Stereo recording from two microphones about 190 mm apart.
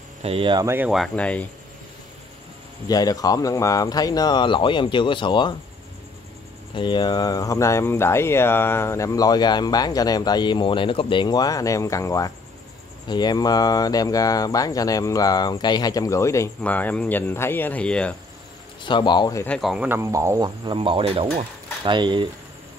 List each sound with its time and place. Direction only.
0.2 s speech: 30° right (ahead or behind)
0.7 s speech: 10° right (ahead or behind)
2.9 s speech: 20° left (ahead or behind)
6.7 s speech: 25° left (ahead or behind); by 18.1 s 5° left (ahead or behind)
18.9 s speech: 25° left (ahead or behind)
19.4 s speech: 5° left (ahead or behind); by 22.3 s 25° right (ahead or behind)